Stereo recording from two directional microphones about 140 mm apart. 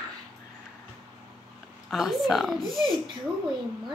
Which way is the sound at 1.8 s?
Centre (ahead or behind).